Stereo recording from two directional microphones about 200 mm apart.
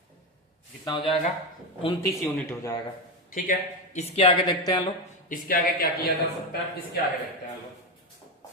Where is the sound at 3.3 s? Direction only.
40° left (ahead or behind); by 4.9 s 25° left (ahead or behind).